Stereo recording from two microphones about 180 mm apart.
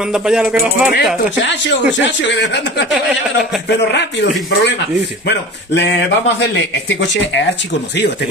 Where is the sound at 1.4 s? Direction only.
80° left.